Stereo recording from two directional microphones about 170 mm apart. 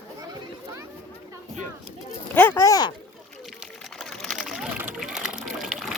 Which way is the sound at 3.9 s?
Centre (ahead or behind).